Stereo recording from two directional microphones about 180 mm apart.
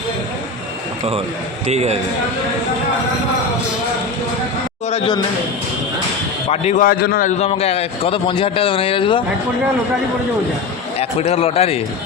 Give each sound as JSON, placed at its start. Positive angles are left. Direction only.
{"t": 1.6, "sound": "a man's voice", "side_deg": -35}
{"t": 4.9, "sound": "speech", "side_deg": 30}
{"t": 6.5, "sound": "a man's voice", "side_deg": 35}
{"t": 6.8, "sound": "a man's voice", "side_deg": 55}
{"t": 10.9, "sound": "a man's voice", "side_deg": 35}